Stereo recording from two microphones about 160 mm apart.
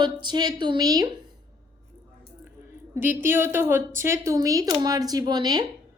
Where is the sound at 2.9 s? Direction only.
15° right (ahead or behind).